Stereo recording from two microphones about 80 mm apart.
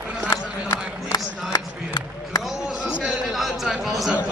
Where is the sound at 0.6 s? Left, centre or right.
Left.